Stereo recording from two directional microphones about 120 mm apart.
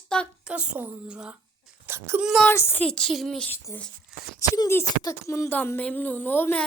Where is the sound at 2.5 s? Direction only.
20° left (ahead or behind).